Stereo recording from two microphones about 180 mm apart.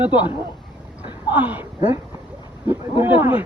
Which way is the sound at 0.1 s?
25° left (ahead or behind).